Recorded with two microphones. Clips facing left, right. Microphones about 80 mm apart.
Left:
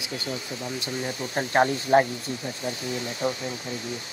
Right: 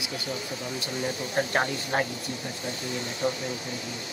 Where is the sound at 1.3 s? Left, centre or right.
Left.